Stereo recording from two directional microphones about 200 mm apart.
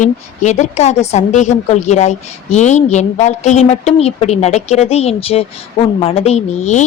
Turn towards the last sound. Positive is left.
turn(degrees=35)  # may be behind; listen again after turning